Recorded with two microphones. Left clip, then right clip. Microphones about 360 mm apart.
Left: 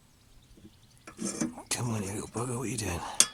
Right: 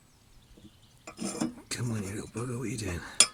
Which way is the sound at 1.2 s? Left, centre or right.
Centre.